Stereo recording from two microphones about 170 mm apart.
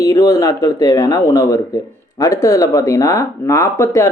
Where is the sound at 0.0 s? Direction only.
20° left (ahead or behind).